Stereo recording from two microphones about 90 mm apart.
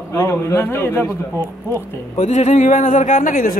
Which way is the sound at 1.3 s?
35° right (ahead or behind).